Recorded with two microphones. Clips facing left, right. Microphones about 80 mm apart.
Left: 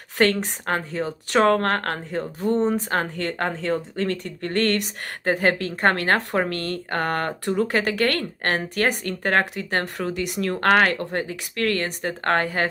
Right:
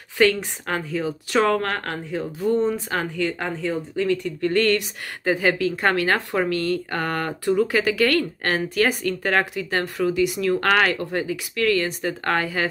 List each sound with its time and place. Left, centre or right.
0.2 s speech: left
4.5 s speech: left
10.2 s speech: left
10.5 s speech: left